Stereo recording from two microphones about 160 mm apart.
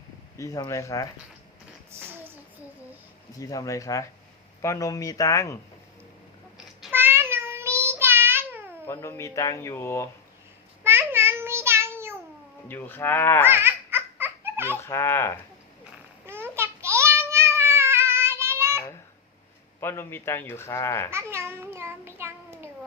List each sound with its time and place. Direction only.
0.3 s speech: 20° left (ahead or behind)
1.9 s a sound: 15° right (ahead or behind)
3.3 s speech: 20° left (ahead or behind)
6.9 s meow: 15° right (ahead or behind)
8.9 s speech: 15° left (ahead or behind)
10.8 s child singing: 15° right (ahead or behind)
12.6 s speech: 10° left (ahead or behind)
13.4 s baby laughter: 15° right (ahead or behind)
14.8 s speech: 15° left (ahead or behind)
16.2 s babbling: 15° right (ahead or behind)
19.8 s speech: 15° left (ahead or behind)
21.1 s a sound: 15° right (ahead or behind)